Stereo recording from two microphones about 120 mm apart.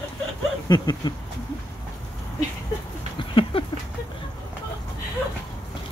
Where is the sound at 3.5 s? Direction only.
50° left (ahead or behind).